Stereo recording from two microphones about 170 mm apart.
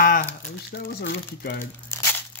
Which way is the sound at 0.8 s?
70° left (ahead or behind).